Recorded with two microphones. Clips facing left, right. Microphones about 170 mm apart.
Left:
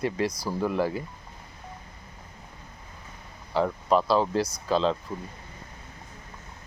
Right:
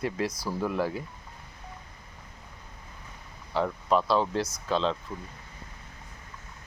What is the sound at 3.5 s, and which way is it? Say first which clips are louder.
Speech: left 2 dB; centre (ahead or behind).